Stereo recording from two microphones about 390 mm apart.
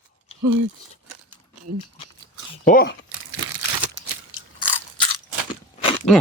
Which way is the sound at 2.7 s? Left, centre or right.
Left.